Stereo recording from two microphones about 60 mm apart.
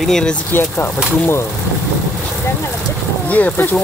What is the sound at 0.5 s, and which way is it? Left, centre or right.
Speech, left.